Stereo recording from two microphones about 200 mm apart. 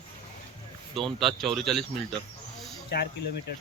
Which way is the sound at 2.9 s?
55° left (ahead or behind).